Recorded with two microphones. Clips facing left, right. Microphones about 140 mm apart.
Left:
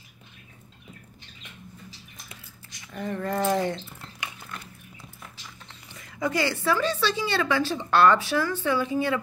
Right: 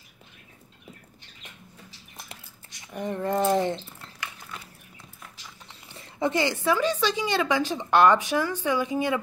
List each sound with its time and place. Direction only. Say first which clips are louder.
2.9 s speech: right 2 dB; 20° right (ahead or behind)
5.9 s a woman's voice: right 2 dB; 30° right (ahead or behind)